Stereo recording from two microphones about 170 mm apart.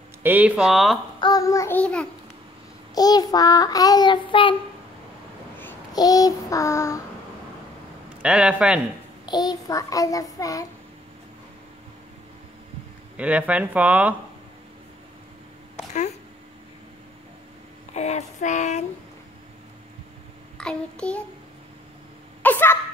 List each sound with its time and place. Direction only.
0.2 s speech: 10° right (ahead or behind)
1.2 s child singing: 20° left (ahead or behind)
2.9 s child singing: 25° left (ahead or behind)
5.9 s child singing: 20° left (ahead or behind)
8.2 s speech: 5° right (ahead or behind)
9.2 s child singing: 25° left (ahead or behind)
13.2 s speech: 10° right (ahead or behind)
17.9 s child singing: 40° left (ahead or behind)
20.5 s child singing: 5° left (ahead or behind)
22.4 s speech: 10° left (ahead or behind)